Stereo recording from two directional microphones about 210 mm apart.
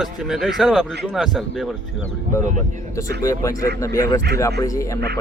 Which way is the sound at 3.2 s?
15° left (ahead or behind).